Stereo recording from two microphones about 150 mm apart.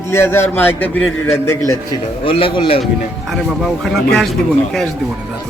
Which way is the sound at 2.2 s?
35° left (ahead or behind).